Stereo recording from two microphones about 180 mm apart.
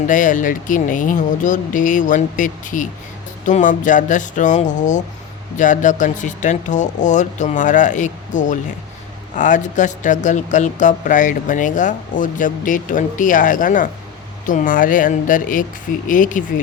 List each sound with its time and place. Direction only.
0.1 s speech: 45° left (ahead or behind)